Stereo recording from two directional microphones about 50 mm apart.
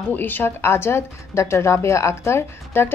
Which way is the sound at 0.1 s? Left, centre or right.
Left.